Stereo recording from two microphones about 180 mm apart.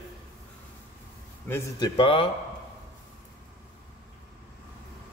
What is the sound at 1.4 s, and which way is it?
Speech, 15° left (ahead or behind).